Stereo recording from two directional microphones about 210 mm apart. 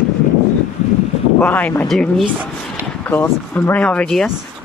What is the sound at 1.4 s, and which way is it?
Speech, 5° left (ahead or behind).